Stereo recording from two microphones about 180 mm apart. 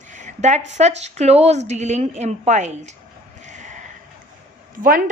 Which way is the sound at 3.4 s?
40° right (ahead or behind).